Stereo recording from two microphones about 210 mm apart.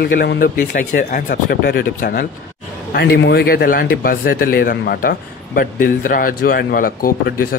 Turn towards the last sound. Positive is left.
turn(degrees=45)  # may be behind; listen again after turning